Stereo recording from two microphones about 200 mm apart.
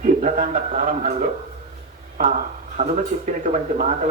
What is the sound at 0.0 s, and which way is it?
Speech, 40° right (ahead or behind).